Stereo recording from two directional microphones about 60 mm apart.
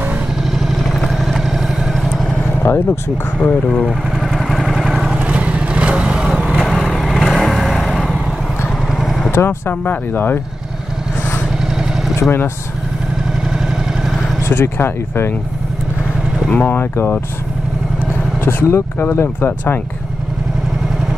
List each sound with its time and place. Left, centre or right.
0.4 s vehicle: centre
3.3 s speech: left
3.8 s vehicle: centre
5.2 s vehicle: centre
6.8 s vehicle: centre
9.3 s speech: left
11.6 s vehicle: centre
12.2 s speech: left
13.4 s vehicle: centre
14.4 s speech: left
16.4 s speech: left
18.1 s speech: left